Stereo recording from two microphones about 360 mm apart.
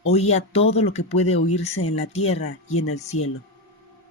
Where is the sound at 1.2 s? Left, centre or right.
Left.